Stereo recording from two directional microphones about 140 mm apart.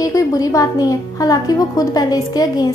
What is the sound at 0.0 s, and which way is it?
A woman's voice, 25° left (ahead or behind).